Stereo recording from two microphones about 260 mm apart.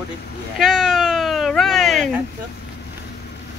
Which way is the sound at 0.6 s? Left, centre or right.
Centre.